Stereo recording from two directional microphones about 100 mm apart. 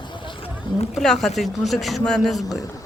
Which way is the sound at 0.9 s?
5° left (ahead or behind).